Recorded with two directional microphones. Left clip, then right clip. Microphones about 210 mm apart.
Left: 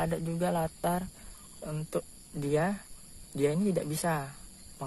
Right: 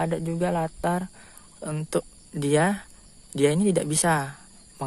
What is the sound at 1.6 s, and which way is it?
A man's voice, 40° right (ahead or behind).